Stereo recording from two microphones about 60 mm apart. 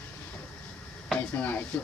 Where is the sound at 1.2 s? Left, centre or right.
Left.